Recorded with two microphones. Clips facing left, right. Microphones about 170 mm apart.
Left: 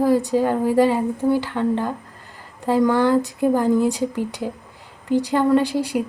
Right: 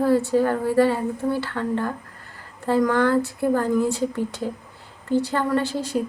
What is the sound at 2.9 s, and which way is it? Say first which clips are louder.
Speech: left 2 dB; 15° left (ahead or behind).